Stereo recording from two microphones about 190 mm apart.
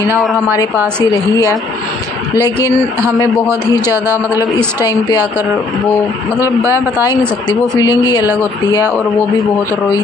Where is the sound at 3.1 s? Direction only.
20° left (ahead or behind).